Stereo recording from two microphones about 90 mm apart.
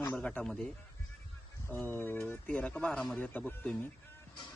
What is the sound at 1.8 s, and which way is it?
Speech, 20° left (ahead or behind).